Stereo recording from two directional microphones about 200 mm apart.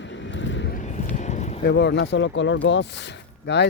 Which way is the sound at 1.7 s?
60° left (ahead or behind).